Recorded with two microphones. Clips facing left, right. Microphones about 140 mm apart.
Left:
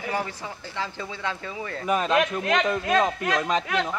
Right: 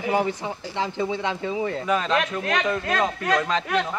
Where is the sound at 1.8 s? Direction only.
10° left (ahead or behind).